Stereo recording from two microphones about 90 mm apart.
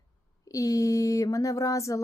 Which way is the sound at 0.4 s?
35° left (ahead or behind).